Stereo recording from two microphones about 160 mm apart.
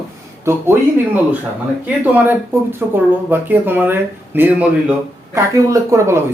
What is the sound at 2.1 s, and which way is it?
Speech, 10° right (ahead or behind).